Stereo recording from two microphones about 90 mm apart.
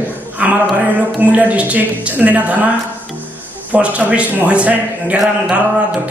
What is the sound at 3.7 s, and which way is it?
A man's voice, 15° right (ahead or behind).